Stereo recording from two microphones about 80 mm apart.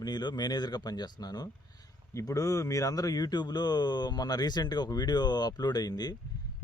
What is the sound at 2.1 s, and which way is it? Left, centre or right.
Speech, left.